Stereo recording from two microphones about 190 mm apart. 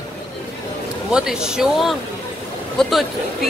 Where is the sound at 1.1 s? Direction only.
5° right (ahead or behind).